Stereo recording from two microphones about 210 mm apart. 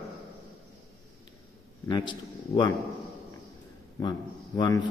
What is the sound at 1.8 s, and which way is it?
Speech, 20° left (ahead or behind).